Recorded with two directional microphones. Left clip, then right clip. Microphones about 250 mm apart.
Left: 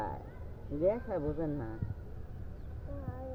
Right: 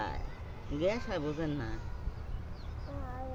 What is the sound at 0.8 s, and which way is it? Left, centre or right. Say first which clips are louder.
Speech: left 1 dB; right.